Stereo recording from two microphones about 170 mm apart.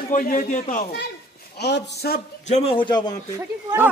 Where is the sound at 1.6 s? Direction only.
75° left (ahead or behind).